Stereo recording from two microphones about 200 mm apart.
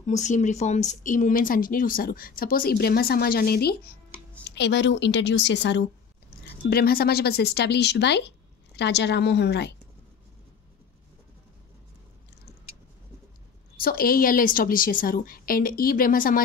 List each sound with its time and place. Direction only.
0.0 s a woman's voice: 35° left (ahead or behind); by 5.9 s 60° left (ahead or behind)
6.4 s a woman's voice: 50° left (ahead or behind)
13.7 s speech: 45° left (ahead or behind)